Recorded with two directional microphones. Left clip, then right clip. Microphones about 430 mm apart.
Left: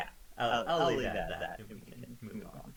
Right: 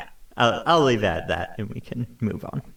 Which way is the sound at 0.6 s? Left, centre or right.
Right.